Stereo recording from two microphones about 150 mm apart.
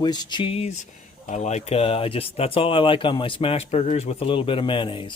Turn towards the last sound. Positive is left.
turn(degrees=35)  # may be behind; listen again after turning